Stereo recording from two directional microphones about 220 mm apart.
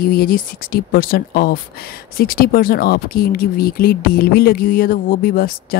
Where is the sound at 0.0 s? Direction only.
40° left (ahead or behind).